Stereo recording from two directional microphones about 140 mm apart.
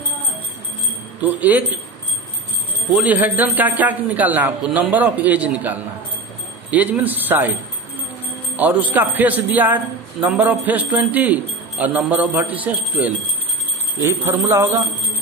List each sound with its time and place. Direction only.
1.2 s a man's voice: 10° right (ahead or behind)
3.0 s a man's voice: 10° right (ahead or behind)
8.5 s a man's voice: 10° right (ahead or behind)